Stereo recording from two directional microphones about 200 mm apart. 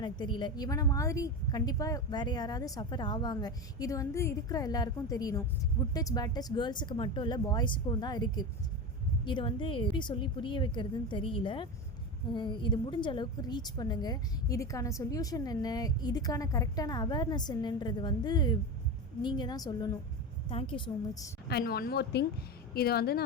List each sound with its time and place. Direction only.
0.0 s a woman's voice: 20° left (ahead or behind)
21.4 s a woman's voice: 50° left (ahead or behind)